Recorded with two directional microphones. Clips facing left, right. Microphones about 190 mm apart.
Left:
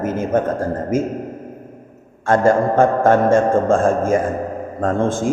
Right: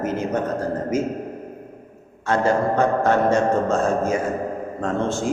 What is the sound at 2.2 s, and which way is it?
A man's voice, 50° left (ahead or behind).